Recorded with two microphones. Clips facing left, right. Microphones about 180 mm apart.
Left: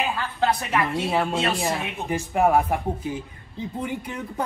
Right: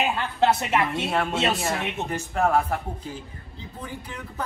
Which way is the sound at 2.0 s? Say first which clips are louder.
Left 5 dB; 15° left (ahead or behind).